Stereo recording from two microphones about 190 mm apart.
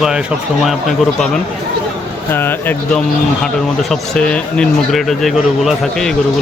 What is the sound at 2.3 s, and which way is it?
Speech, 10° left (ahead or behind).